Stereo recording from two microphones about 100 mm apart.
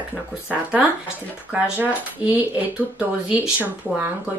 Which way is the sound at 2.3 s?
15° right (ahead or behind).